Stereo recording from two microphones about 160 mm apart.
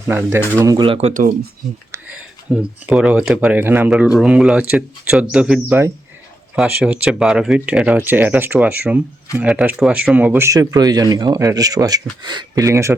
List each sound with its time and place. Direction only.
0.1 s speech: 10° right (ahead or behind)
0.6 s speech: 20° right (ahead or behind)
0.9 s speech: 40° right (ahead or behind)
1.9 s speech: 5° right (ahead or behind)